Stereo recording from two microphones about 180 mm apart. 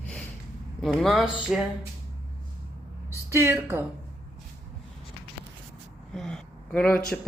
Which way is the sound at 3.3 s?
15° right (ahead or behind).